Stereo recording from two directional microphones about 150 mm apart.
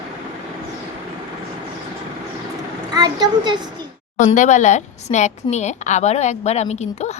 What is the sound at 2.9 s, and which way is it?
Speech, 25° right (ahead or behind).